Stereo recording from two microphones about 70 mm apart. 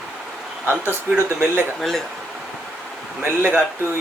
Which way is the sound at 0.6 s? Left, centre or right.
Right.